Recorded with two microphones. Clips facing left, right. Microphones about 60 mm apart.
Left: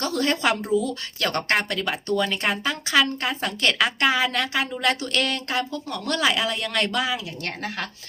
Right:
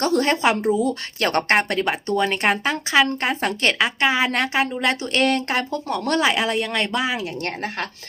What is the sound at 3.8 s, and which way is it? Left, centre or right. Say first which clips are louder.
Speech: right 1 dB; centre.